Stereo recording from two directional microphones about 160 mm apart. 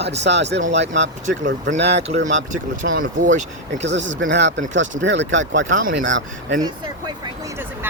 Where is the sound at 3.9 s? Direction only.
90° right.